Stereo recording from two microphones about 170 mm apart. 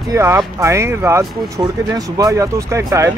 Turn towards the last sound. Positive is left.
turn(degrees=-15)  # may be behind; listen again after turning